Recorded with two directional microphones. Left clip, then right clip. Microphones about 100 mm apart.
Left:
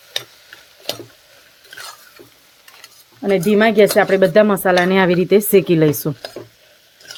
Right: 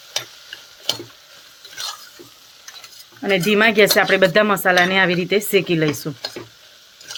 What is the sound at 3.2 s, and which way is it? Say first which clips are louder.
Speech: left 1 dB; 60° left (ahead or behind).